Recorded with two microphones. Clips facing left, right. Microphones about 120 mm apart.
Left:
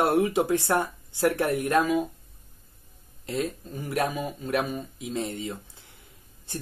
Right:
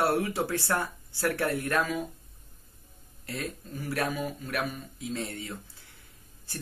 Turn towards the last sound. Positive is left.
turn(degrees=20)  # may be behind; listen again after turning